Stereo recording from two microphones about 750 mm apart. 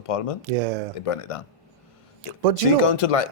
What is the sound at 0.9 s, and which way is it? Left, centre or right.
Speech, left.